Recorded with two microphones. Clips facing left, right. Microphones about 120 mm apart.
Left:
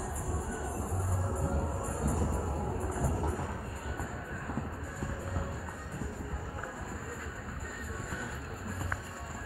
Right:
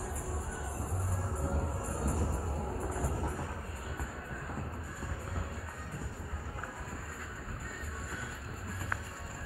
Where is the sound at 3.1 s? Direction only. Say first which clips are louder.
Left 3 dB; 15° left (ahead or behind).